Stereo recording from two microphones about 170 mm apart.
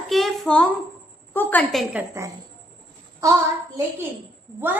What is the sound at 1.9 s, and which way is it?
A woman's voice, 15° right (ahead or behind).